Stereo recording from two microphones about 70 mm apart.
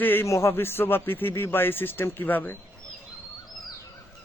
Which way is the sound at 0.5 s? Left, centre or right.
Left.